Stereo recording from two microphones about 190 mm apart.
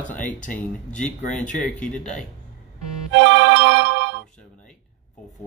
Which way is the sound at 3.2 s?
80° right.